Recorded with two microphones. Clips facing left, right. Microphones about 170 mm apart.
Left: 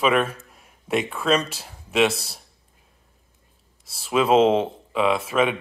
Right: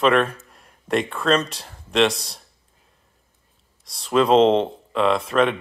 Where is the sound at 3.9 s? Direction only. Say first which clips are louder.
Right 2 dB; 5° left (ahead or behind).